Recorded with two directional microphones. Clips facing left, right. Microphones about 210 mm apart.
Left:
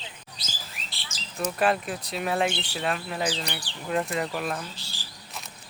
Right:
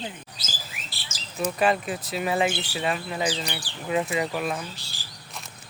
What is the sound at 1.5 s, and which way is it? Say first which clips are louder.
Speech: right 1 dB; centre (ahead or behind).